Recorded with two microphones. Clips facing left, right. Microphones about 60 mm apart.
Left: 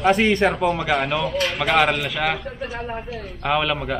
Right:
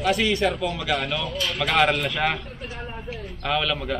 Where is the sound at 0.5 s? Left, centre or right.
Left.